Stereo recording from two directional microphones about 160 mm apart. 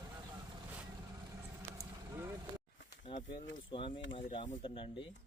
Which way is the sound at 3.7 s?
35° left (ahead or behind).